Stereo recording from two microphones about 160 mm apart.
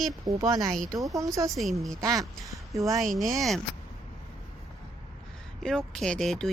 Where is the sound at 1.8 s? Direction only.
Centre (ahead or behind).